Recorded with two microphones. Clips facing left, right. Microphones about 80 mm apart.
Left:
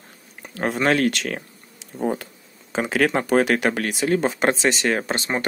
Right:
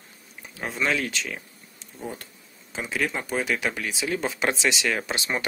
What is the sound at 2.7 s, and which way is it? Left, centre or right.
Speech, left.